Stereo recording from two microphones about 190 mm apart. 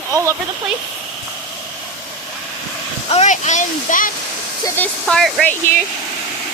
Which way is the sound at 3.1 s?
40° left (ahead or behind).